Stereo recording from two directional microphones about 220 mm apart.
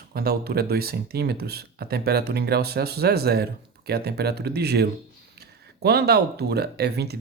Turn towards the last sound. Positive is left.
turn(degrees=-45)  # may be behind; listen again after turning